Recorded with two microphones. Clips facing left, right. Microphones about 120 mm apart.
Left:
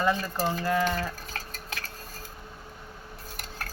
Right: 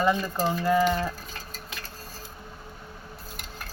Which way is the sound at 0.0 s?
15° right (ahead or behind).